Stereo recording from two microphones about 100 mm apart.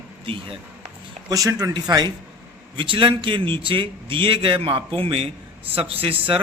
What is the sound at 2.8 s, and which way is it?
A man's voice, 60° right (ahead or behind).